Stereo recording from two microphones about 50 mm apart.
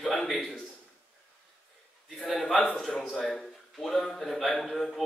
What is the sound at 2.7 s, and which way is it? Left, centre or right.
A man's voice, centre.